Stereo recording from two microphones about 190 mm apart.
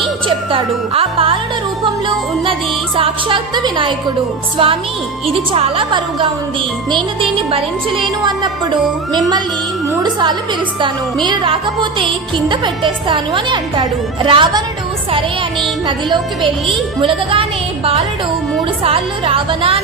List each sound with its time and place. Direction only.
0.5 s music: 30° right (ahead or behind)
2.4 s music: 30° right (ahead or behind)
7.5 s music: 25° right (ahead or behind)
10.0 s music: 25° right (ahead or behind)
16.6 s music: 30° right (ahead or behind)
18.8 s music: 30° right (ahead or behind)